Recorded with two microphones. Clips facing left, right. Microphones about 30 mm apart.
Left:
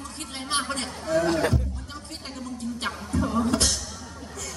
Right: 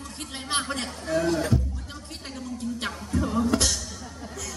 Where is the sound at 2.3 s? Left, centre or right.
Centre.